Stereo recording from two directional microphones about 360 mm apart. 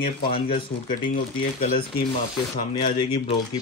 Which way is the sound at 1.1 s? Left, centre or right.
Left.